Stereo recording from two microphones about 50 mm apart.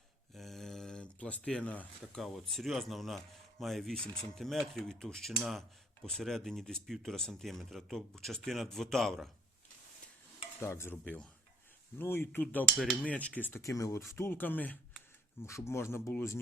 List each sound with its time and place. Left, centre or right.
0.3 s a sound: centre; by 1.7 s left
2.2 s cutlery: centre
6.2 s speech: centre
6.8 s cutlery: centre
10.6 s speech: left
11.9 s speech: left
12.7 s cutlery: centre
13.1 s speech: left
13.6 s speech: left
14.3 s speech: left
15.4 s speech: left
16.0 s speech: left